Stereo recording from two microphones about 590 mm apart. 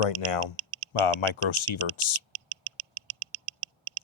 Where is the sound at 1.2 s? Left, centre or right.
Left.